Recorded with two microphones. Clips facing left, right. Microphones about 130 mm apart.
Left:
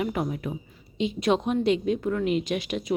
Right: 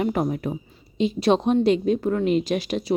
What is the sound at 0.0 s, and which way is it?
A woman's voice, 40° right (ahead or behind).